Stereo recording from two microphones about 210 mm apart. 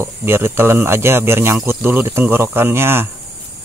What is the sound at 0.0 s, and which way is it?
Speech, 10° right (ahead or behind).